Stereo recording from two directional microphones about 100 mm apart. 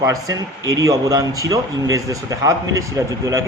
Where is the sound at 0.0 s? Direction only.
35° right (ahead or behind).